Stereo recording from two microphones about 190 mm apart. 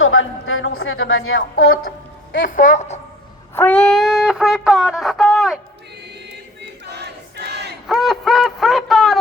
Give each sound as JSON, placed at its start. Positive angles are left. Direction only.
{"t": 0.0, "sound": "speech", "side_deg": 90}
{"t": 2.5, "sound": "a woman's voice", "side_deg": 45}
{"t": 3.5, "sound": "music", "side_deg": 10}
{"t": 6.6, "sound": "crowd", "side_deg": -60}
{"t": 7.9, "sound": "a sound", "side_deg": 0}